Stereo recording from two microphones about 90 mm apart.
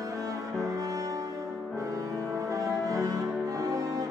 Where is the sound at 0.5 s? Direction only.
40° right (ahead or behind).